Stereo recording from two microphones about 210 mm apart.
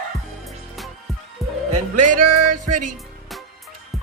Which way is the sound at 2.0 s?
40° right (ahead or behind).